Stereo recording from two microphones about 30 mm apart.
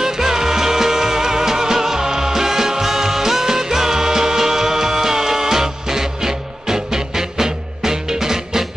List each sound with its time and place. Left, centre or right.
0.0 s music: centre